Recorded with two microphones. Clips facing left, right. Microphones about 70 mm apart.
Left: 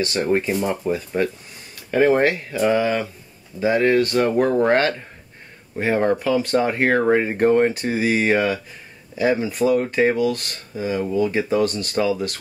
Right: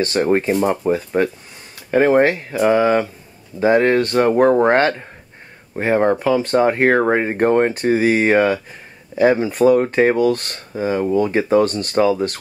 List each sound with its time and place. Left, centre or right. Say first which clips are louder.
0.0 s speech: right 4 dB; right